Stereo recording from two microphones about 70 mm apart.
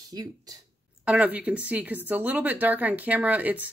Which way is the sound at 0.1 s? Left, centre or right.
Right.